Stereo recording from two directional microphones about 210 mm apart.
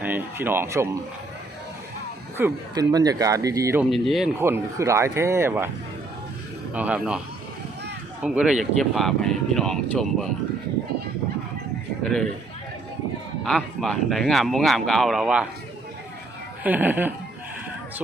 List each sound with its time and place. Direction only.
0.0 s speech: 10° right (ahead or behind)
2.4 s speech: 20° right (ahead or behind)
3.8 s speech: centre (ahead or behind)
4.4 s speech: 10° right (ahead or behind)
6.7 s speech: 5° right (ahead or behind)
8.2 s speech: 5° right (ahead or behind)
12.0 s speech: centre (ahead or behind)
13.4 s speech: centre (ahead or behind)
16.6 s speech: 10° right (ahead or behind)